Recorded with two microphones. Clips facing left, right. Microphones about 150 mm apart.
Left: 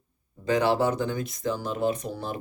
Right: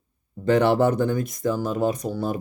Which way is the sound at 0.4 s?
60° right (ahead or behind).